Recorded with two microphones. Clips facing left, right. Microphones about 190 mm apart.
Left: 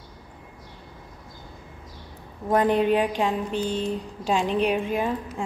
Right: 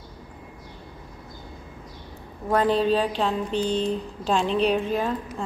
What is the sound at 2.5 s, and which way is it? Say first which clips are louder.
Speech: left 1 dB; 20° left (ahead or behind).